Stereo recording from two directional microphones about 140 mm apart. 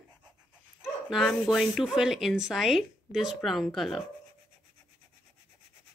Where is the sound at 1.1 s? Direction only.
Centre (ahead or behind).